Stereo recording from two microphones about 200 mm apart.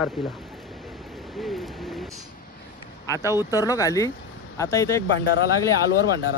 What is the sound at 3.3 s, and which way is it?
Speech, 15° left (ahead or behind).